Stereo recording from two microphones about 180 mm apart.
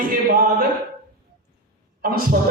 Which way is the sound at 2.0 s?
55° right (ahead or behind).